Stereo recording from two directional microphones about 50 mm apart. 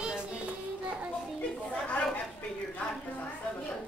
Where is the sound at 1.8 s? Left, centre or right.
Left.